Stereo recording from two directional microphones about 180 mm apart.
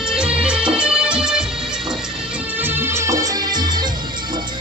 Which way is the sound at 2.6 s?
10° right (ahead or behind).